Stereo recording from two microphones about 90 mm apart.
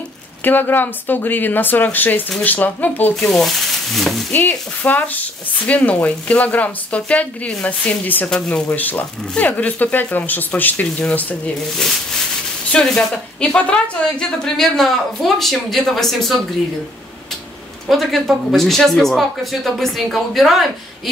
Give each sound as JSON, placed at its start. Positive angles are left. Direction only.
{"t": 0.4, "sound": "speech", "side_deg": 20}
{"t": 3.2, "sound": "a woman's voice", "side_deg": 5}
{"t": 4.3, "sound": "speech", "side_deg": 20}
{"t": 12.7, "sound": "a woman's voice", "side_deg": 10}
{"t": 17.8, "sound": "a woman's voice", "side_deg": 0}